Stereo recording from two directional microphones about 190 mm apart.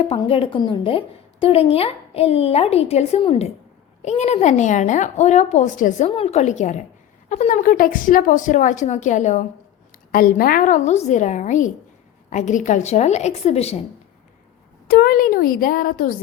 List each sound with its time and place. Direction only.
0.2 s a woman's voice: 30° left (ahead or behind)
6.1 s a woman's voice: 30° left (ahead or behind)
14.8 s a woman's voice: 55° left (ahead or behind)